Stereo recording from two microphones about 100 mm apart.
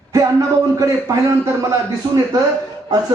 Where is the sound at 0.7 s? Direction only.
30° right (ahead or behind).